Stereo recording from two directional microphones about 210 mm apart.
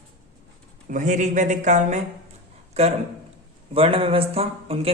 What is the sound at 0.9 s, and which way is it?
A man's voice, 35° right (ahead or behind).